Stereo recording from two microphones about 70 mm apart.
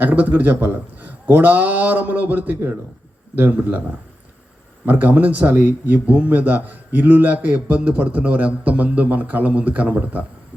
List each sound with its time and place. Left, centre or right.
0.0 s a man's voice: right
4.9 s a man's voice: right